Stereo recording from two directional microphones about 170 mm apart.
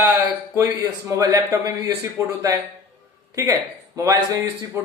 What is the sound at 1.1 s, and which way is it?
A man's voice, 20° right (ahead or behind).